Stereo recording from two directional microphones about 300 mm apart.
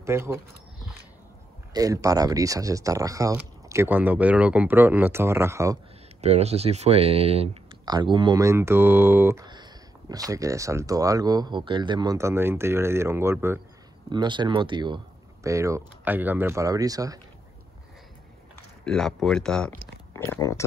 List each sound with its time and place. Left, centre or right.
0.0 s a sound: centre
1.7 s speech: centre
6.2 s speech: right
18.9 s speech: centre